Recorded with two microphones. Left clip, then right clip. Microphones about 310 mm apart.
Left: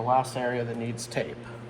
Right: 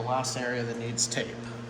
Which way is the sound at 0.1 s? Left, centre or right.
Centre.